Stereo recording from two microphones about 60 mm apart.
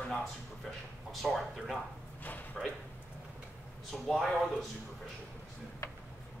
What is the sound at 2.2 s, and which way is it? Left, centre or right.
Speech, left.